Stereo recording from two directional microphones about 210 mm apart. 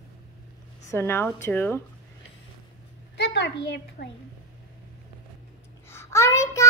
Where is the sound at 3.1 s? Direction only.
55° left (ahead or behind).